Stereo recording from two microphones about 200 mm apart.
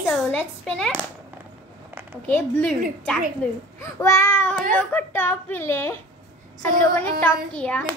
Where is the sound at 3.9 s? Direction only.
15° left (ahead or behind).